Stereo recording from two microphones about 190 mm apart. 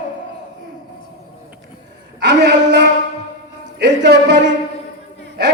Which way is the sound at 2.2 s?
65° right (ahead or behind).